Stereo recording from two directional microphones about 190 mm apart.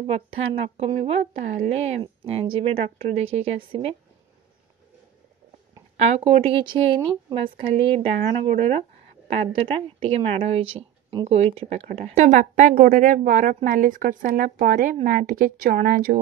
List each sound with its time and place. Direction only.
0.0 s a woman's voice: 30° right (ahead or behind)
5.9 s a woman's voice: 35° right (ahead or behind)